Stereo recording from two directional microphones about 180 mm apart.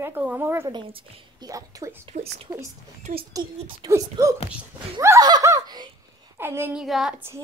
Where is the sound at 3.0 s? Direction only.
40° right (ahead or behind).